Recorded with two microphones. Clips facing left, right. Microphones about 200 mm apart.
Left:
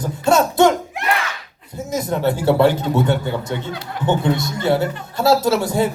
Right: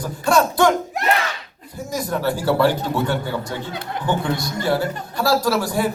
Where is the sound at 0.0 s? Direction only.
25° left (ahead or behind).